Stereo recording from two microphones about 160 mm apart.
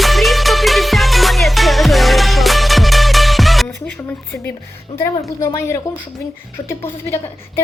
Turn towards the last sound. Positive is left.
turn(degrees=15)  # may be behind; listen again after turning